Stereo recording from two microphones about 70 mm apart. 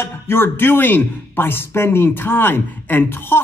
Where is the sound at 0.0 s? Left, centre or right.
Left.